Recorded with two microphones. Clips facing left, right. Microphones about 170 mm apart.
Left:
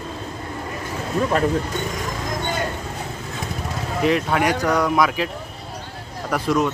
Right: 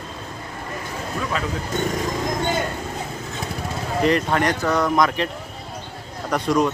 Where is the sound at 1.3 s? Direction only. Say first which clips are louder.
Left 8 dB; 50° left (ahead or behind).